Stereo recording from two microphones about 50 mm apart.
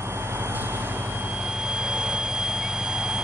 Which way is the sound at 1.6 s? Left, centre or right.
Centre.